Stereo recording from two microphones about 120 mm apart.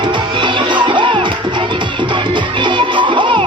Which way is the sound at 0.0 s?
40° right (ahead or behind).